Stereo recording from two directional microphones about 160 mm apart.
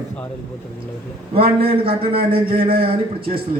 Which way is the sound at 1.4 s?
35° right (ahead or behind).